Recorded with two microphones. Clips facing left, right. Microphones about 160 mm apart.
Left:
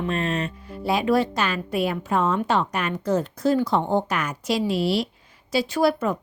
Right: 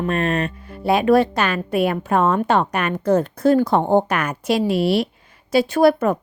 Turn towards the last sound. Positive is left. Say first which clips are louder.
# right 6 dB
turn(degrees=-55)  # may be behind; listen again after turning